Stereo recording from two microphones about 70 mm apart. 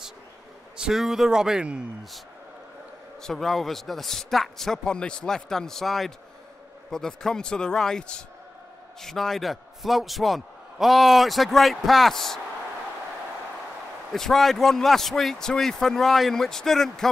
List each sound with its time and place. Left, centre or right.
0.7 s a man's voice: centre
3.2 s a man's voice: centre
14.1 s a man's voice: centre